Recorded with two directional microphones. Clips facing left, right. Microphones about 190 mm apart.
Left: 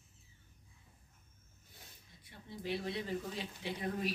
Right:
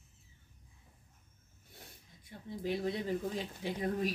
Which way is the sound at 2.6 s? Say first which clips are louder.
Right 4 dB; 45° right (ahead or behind).